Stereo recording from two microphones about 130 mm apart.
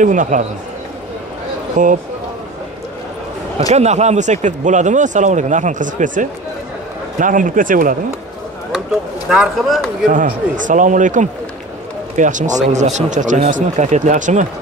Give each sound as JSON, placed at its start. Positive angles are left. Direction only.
{"t": 0.0, "sound": "speech", "side_deg": -75}
{"t": 1.8, "sound": "speech", "side_deg": -80}
{"t": 3.7, "sound": "a man's voice", "side_deg": -60}
{"t": 9.3, "sound": "a man's voice", "side_deg": -5}
{"t": 10.0, "sound": "speech", "side_deg": -90}
{"t": 12.6, "sound": "speech", "side_deg": -60}